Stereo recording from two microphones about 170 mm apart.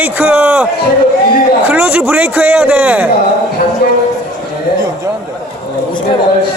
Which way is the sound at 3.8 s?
65° left (ahead or behind).